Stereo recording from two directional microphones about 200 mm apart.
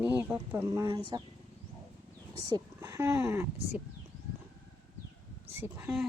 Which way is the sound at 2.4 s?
20° right (ahead or behind).